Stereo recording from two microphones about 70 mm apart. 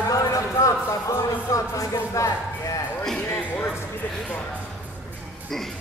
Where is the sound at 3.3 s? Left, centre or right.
Left.